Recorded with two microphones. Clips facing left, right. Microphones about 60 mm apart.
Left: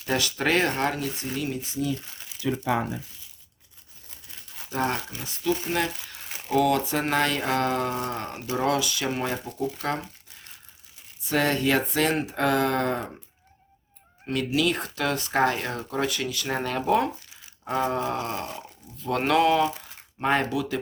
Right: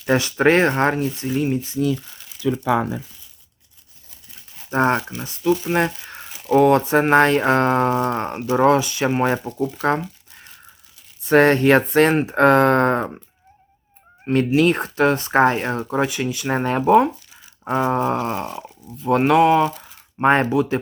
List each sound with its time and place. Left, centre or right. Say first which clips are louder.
0.0 s speech: right 9 dB; right
4.7 s speech: right 9 dB; right
9.2 s speech: right 8 dB; right
11.3 s speech: right 10 dB; right
14.3 s speech: right 8 dB; right
20.1 s speech: right 8 dB; right